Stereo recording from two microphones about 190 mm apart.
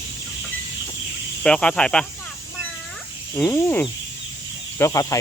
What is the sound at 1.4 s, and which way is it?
Speech, 5° left (ahead or behind).